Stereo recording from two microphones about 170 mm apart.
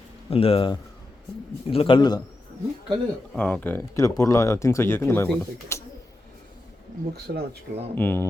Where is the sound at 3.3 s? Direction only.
10° left (ahead or behind).